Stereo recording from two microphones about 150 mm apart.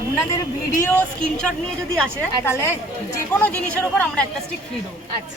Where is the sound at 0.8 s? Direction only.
10° left (ahead or behind).